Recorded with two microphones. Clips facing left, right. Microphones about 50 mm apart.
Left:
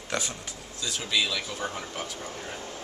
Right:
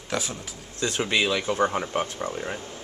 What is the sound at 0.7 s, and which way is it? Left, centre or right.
Speech, right.